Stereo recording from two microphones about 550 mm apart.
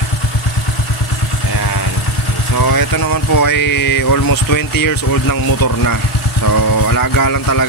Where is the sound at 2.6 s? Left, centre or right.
Left.